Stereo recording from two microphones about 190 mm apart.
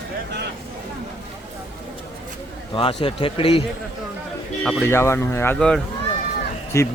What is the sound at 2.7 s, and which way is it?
Speech, 30° left (ahead or behind).